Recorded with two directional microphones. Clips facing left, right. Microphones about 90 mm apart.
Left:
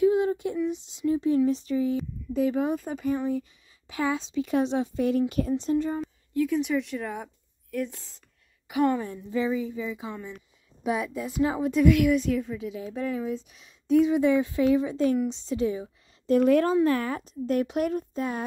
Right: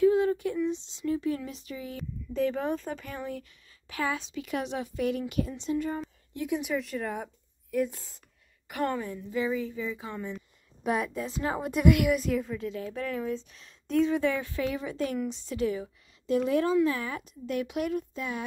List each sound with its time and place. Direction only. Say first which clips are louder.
0.0 s a sound: left 1 dB; 20° left (ahead or behind)
0.6 s speech: left 1 dB; 10° left (ahead or behind)
1.0 s speech: left 7 dB; 25° left (ahead or behind)
2.0 s speech: left 3 dB; 10° left (ahead or behind); by 5.9 s 35° left (ahead or behind)
6.3 s speech: left 6 dB; 20° right (ahead or behind)
6.6 s a woman's voice: left 3 dB; centre (ahead or behind)
8.6 s a woman's voice: left 6 dB; 5° left (ahead or behind)
9.0 s speech: left 3 dB; 30° left (ahead or behind)
10.3 s a woman's voice: right 3 dB; centre (ahead or behind)
11.6 s a woman's voice: left 2 dB; 5° right (ahead or behind)
14.1 s speech: left 6 dB; 20° left (ahead or behind)
16.3 s speech: left 5 dB; 50° left (ahead or behind)